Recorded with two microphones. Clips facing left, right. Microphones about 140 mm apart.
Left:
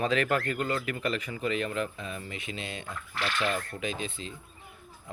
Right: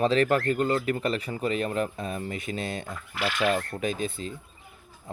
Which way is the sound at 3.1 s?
10° right (ahead or behind).